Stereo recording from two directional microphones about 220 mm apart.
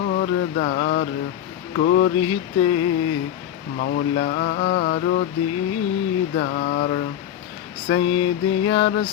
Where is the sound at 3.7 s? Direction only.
45° left (ahead or behind).